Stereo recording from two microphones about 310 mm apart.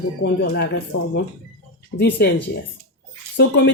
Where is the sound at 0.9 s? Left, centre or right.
Left.